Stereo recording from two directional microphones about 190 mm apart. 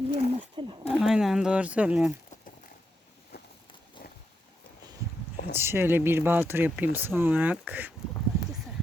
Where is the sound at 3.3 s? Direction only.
55° left (ahead or behind).